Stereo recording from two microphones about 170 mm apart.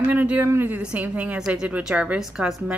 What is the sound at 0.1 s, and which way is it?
A woman's voice, 10° right (ahead or behind).